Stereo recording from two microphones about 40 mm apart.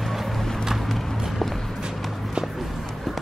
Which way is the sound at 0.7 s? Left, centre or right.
Centre.